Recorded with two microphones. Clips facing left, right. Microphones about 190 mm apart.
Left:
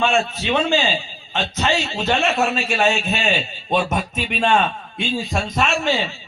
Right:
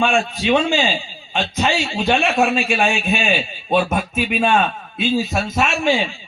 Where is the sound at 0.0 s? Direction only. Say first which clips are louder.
Right 1 dB; 15° right (ahead or behind).